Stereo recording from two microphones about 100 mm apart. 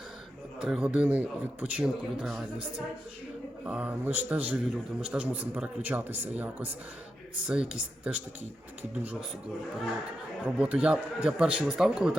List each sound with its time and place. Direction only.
0.6 s a man's voice: 10° right (ahead or behind)
10.4 s a man's voice: 15° right (ahead or behind)